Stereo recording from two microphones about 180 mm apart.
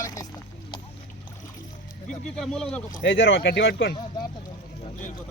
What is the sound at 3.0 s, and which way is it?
Speech, 85° left.